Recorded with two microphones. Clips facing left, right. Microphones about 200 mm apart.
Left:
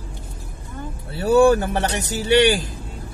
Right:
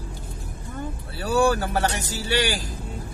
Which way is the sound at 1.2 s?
20° left (ahead or behind).